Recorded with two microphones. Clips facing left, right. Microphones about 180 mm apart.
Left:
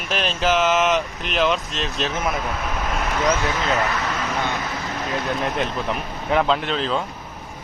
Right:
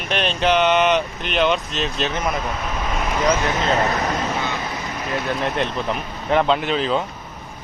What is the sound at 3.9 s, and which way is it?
Speech, 40° right (ahead or behind).